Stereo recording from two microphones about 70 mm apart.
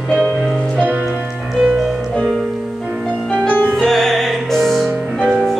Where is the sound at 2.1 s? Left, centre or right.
Centre.